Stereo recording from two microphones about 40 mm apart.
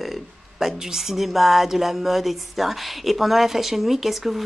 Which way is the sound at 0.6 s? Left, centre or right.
Centre.